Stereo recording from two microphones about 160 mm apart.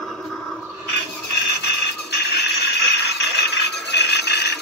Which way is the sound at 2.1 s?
90° left.